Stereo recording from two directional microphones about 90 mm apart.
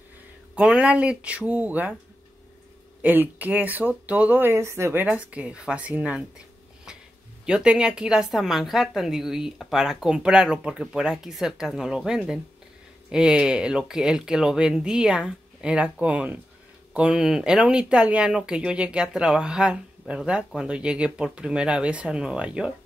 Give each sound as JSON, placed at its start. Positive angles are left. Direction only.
{"t": 0.6, "sound": "speech", "side_deg": -15}
{"t": 3.0, "sound": "speech", "side_deg": -20}
{"t": 5.0, "sound": "speech", "side_deg": -15}
{"t": 7.4, "sound": "a woman's voice", "side_deg": -10}